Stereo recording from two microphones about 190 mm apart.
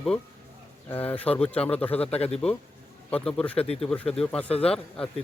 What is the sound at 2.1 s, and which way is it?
Speech, 35° left (ahead or behind).